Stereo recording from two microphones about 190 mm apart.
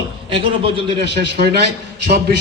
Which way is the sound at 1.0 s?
65° right (ahead or behind).